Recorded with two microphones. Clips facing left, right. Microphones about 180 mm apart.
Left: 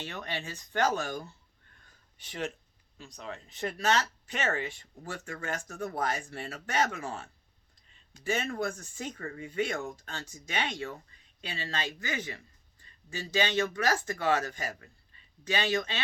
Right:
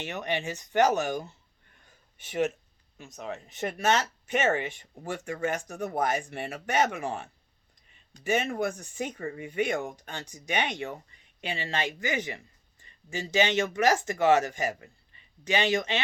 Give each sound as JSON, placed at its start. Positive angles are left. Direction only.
{"t": 0.0, "sound": "speech", "side_deg": -20}
{"t": 1.8, "sound": "a sound", "side_deg": -20}
{"t": 3.2, "sound": "speech", "side_deg": -15}